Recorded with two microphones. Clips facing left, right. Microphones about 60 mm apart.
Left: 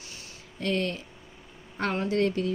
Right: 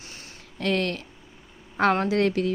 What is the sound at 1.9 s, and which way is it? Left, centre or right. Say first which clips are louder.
Speech: left 1 dB; right.